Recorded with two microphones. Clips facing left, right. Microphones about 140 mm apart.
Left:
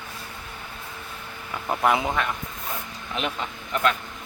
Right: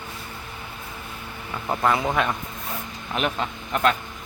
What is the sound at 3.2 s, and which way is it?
Speech, 60° right (ahead or behind).